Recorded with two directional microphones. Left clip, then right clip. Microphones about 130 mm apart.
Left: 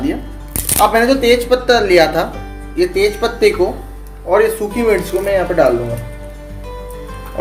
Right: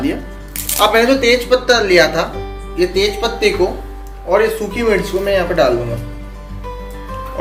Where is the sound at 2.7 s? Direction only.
90° left.